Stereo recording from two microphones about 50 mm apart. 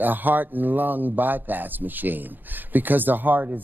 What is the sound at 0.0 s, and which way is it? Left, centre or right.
Speech, right.